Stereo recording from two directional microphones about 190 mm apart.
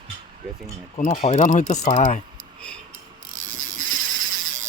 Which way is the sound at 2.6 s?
5° left (ahead or behind).